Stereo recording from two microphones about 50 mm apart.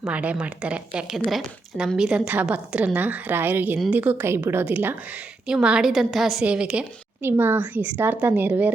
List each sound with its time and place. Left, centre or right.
0.1 s a woman's voice: right
1.1 s a woman's voice: centre
2.0 s a woman's voice: right
3.9 s a woman's voice: right
4.2 s a woman's voice: right
4.6 s a woman's voice: right
5.6 s a woman's voice: centre
6.1 s a woman's voice: centre
6.4 s a woman's voice: right
7.2 s a woman's voice: right
7.6 s a woman's voice: right